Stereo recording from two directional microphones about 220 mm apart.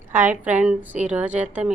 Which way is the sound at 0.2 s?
5° right (ahead or behind).